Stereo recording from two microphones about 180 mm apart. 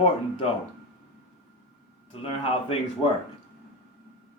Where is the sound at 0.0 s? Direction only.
30° left (ahead or behind).